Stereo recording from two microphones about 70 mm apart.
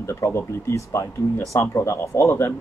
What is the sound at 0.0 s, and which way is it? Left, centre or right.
Speech, left.